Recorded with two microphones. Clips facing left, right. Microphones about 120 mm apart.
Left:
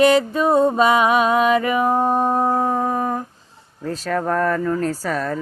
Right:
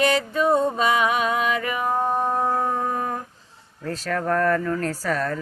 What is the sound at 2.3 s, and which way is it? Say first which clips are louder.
Howl: left 4 dB; 35° left (ahead or behind).